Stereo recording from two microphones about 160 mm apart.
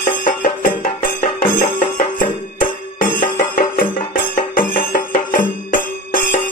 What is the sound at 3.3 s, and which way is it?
Music, 60° left (ahead or behind).